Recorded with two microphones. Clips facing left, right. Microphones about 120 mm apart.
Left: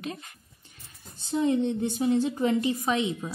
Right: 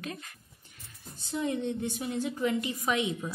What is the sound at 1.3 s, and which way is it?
Speech, 25° left (ahead or behind).